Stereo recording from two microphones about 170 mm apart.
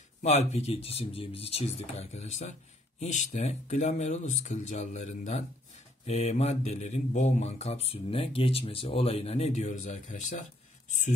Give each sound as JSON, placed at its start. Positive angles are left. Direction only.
{"t": 0.2, "sound": "speech", "side_deg": 40}